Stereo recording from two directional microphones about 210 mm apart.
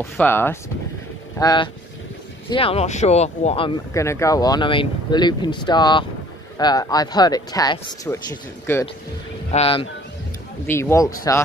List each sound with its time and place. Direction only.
0.0 s speech: 10° left (ahead or behind); by 3.7 s 30° left (ahead or behind)
3.9 s speech: 15° left (ahead or behind)
9.5 s speech: 30° left (ahead or behind)
10.7 s speech: 10° left (ahead or behind)